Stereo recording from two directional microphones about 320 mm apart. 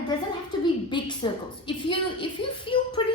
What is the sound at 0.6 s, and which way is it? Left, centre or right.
A woman's voice, centre.